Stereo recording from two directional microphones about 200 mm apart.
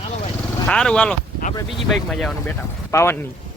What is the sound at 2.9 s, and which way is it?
Speech, 15° left (ahead or behind).